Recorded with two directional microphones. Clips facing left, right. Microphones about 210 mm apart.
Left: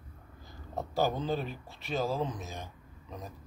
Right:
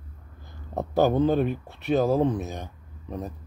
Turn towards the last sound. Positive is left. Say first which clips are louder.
# right 10 dB
turn(degrees=-60)  # may be behind; listen again after turning